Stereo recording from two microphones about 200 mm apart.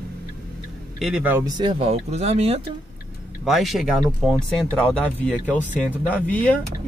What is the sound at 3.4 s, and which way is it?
Speech, centre (ahead or behind).